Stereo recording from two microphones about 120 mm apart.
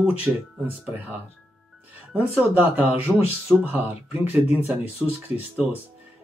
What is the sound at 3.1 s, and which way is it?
Speech, 10° left (ahead or behind).